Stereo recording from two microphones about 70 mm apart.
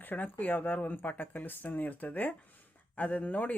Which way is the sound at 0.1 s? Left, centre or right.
Left.